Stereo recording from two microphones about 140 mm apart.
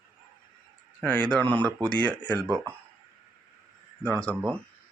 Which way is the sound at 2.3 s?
30° right (ahead or behind).